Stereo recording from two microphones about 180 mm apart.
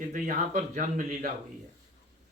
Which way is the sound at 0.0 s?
45° right (ahead or behind).